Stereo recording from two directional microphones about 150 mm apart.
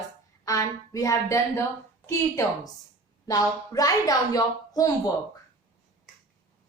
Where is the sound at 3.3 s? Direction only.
25° left (ahead or behind).